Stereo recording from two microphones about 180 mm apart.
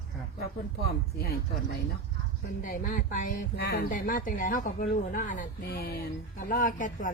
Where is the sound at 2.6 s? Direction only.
50° left (ahead or behind).